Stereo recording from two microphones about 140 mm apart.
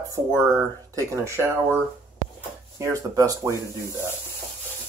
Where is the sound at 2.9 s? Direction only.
25° right (ahead or behind).